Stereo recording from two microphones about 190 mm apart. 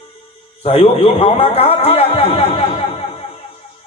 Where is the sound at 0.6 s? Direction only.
30° left (ahead or behind).